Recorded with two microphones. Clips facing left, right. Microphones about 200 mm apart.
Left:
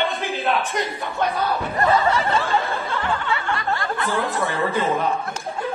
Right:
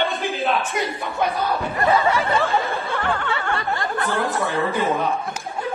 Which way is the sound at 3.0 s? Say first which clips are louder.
Even; 50° right (ahead or behind).